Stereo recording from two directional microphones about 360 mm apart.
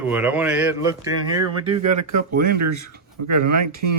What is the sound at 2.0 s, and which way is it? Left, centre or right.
Speech, right.